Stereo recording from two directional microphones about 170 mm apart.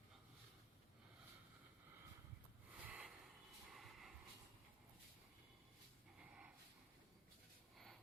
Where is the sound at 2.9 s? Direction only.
10° right (ahead or behind).